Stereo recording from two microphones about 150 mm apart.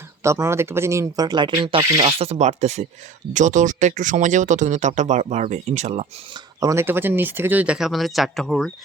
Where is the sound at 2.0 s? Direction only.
45° right (ahead or behind).